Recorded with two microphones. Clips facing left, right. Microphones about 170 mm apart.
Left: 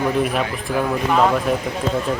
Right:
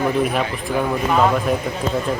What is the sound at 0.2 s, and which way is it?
Speech, centre (ahead or behind).